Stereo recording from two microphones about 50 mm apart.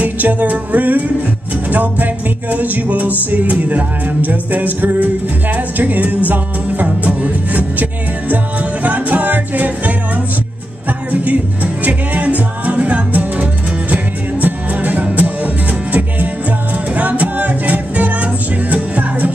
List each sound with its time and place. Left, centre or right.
0.0 s music: right
11.1 s music: right